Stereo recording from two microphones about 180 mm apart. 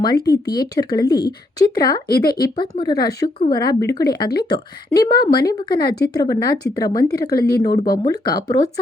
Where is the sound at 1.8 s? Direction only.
55° left (ahead or behind).